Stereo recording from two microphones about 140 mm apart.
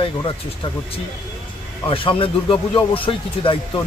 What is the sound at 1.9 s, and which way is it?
Speech, 40° left (ahead or behind).